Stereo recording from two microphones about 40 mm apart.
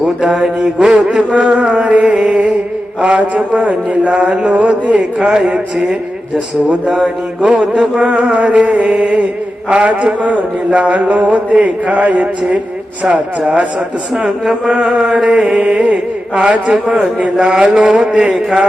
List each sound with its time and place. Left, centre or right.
0.3 s mantra: centre
1.1 s a man's voice: right
3.0 s a sound: right
4.9 s a man's voice: centre
5.7 s mantra: centre
6.7 s a man's voice: right
9.8 s a sound: right
14.2 s mantra: centre
15.2 s a man's voice: right
16.7 s mantra: centre
17.0 s a man's voice: right
17.3 s mantra: centre
17.7 s a man's voice: centre